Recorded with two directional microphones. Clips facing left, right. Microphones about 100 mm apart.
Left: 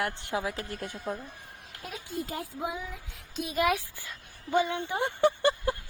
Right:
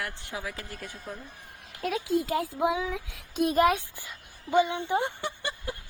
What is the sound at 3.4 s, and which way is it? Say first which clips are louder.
Speech: right 5 dB; 40° right (ahead or behind).